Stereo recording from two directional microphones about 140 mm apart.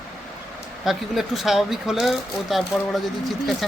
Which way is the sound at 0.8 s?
Centre (ahead or behind).